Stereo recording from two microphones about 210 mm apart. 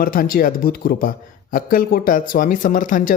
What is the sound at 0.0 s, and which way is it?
Speech, 45° left (ahead or behind).